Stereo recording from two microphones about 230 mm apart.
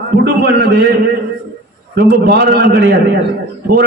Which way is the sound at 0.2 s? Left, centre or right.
Right.